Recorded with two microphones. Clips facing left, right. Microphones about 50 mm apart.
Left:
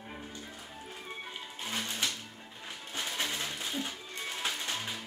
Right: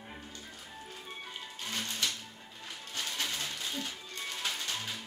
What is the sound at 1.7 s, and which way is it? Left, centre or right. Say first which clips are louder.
Music: left 1 dB; left.